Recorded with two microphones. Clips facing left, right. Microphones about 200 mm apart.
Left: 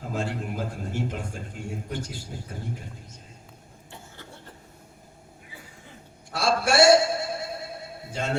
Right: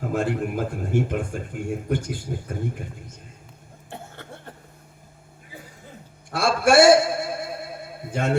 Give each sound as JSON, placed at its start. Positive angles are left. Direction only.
{"t": 0.0, "sound": "speech", "side_deg": -55}
{"t": 3.8, "sound": "cough", "side_deg": -55}
{"t": 6.3, "sound": "a sound", "side_deg": -55}
{"t": 8.1, "sound": "a man's voice", "side_deg": -55}